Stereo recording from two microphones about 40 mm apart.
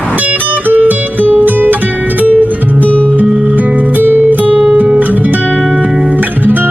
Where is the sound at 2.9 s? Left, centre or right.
Left.